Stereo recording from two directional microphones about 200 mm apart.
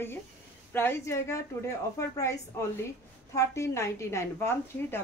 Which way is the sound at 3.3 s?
15° left (ahead or behind).